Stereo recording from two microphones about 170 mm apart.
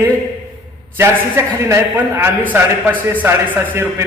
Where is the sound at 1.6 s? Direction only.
15° right (ahead or behind).